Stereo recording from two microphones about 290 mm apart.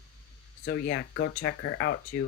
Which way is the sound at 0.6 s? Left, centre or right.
Left.